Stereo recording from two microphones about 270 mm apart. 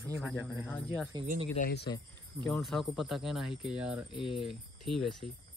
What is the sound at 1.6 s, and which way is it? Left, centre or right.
Speech, left.